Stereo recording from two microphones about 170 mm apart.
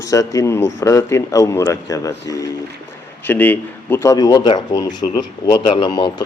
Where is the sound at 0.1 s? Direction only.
20° left (ahead or behind).